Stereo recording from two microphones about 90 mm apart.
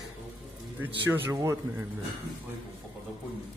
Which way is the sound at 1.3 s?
35° right (ahead or behind).